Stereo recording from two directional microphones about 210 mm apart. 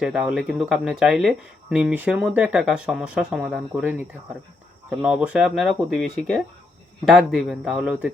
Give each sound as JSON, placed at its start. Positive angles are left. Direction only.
{"t": 0.0, "sound": "speech", "side_deg": -5}